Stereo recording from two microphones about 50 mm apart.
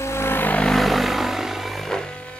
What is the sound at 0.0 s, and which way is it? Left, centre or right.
Vehicle, left.